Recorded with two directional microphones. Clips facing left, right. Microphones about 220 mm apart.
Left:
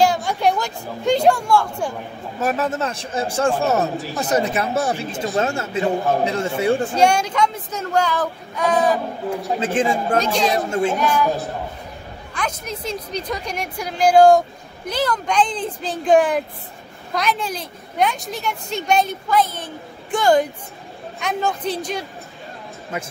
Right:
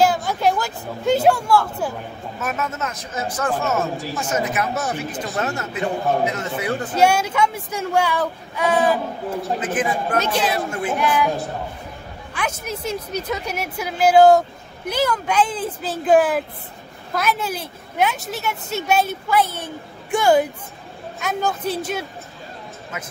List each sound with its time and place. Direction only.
0.0 s speech: 5° right (ahead or behind)
2.4 s speech: 35° left (ahead or behind)
7.0 s a woman's voice: 5° right (ahead or behind)
9.6 s speech: 25° left (ahead or behind)
10.3 s a woman's voice: 5° right (ahead or behind)
10.7 s speech: 25° left (ahead or behind)
11.0 s a woman's voice: 10° right (ahead or behind)